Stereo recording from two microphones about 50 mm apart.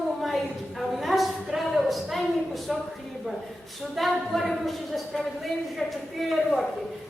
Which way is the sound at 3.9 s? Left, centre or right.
Centre.